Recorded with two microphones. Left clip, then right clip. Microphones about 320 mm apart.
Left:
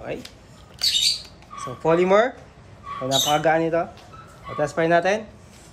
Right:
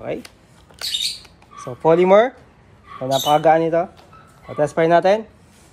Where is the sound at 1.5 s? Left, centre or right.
Centre.